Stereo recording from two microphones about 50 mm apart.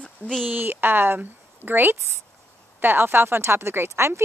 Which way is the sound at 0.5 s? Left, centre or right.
Right.